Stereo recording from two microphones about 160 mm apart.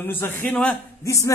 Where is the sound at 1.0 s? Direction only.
20° left (ahead or behind).